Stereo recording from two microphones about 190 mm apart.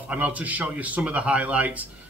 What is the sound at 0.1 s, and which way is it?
Speech, 10° right (ahead or behind).